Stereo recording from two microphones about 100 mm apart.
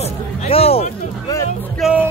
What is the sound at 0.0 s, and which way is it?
Music, 85° left.